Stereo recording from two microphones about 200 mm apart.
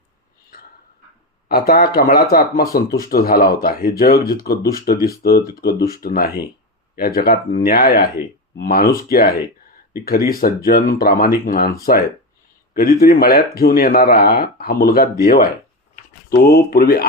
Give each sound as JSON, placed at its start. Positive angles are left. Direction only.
{"t": 1.5, "sound": "speech", "side_deg": 50}